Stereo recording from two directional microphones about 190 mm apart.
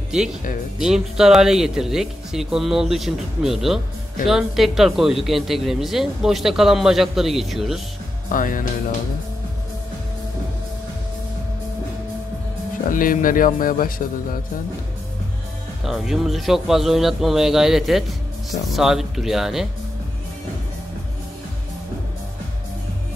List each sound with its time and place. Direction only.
0.7 s speech: 5° right (ahead or behind)
8.3 s a man's voice: 45° left (ahead or behind)
12.9 s a man's voice: 45° left (ahead or behind)
15.8 s speech: centre (ahead or behind)